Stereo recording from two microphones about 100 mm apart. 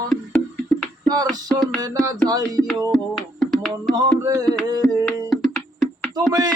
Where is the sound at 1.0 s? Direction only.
40° right (ahead or behind).